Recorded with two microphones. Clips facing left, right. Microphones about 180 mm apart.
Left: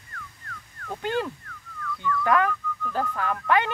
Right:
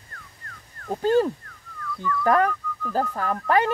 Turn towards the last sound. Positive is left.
turn(degrees=-35)  # may be behind; listen again after turning